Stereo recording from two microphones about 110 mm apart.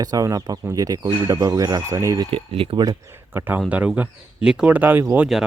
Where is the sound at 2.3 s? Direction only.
60° right (ahead or behind).